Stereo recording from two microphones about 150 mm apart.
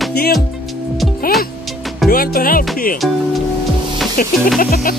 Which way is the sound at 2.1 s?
80° left.